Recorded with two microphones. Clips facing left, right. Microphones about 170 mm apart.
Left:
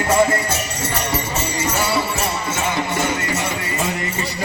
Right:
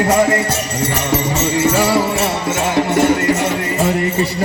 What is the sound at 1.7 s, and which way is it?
Music, 90° right.